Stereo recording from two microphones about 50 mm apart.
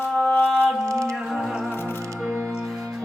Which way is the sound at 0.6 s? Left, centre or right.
Centre.